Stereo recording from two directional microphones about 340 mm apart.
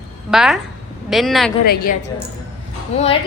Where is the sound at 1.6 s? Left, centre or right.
Left.